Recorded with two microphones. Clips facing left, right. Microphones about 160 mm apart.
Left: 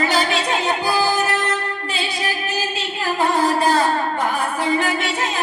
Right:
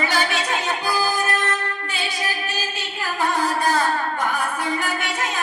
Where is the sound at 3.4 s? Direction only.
30° left (ahead or behind).